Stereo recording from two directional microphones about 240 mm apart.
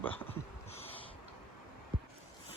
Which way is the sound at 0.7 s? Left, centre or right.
Left.